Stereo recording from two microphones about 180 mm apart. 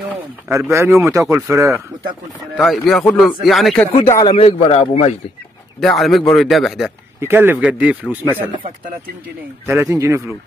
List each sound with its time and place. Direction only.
0.1 s speech: 15° right (ahead or behind)
2.5 s speech: centre (ahead or behind)
4.2 s a man's voice: 30° left (ahead or behind)
5.8 s speech: centre (ahead or behind)
7.2 s speech: 10° right (ahead or behind)
9.7 s speech: 15° right (ahead or behind)